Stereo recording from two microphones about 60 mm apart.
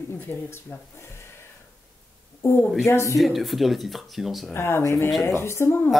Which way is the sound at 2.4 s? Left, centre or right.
Left.